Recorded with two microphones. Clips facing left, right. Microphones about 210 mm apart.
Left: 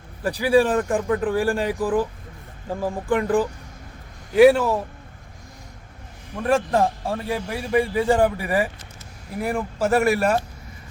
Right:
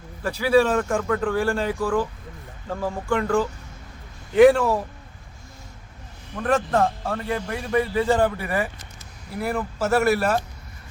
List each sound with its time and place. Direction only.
0.2 s a man's voice: 15° left (ahead or behind)
6.3 s a man's voice: 10° left (ahead or behind)